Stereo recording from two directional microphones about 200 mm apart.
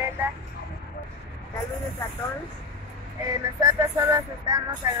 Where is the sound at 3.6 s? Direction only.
15° right (ahead or behind).